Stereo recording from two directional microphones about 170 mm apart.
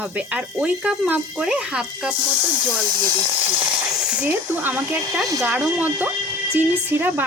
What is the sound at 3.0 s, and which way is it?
Speech, 20° right (ahead or behind).